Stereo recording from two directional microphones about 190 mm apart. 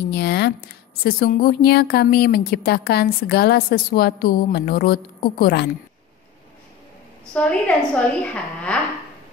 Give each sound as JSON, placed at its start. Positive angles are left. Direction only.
{"t": 0.1, "sound": "a woman's voice", "side_deg": 60}
{"t": 7.3, "sound": "a woman's voice", "side_deg": 5}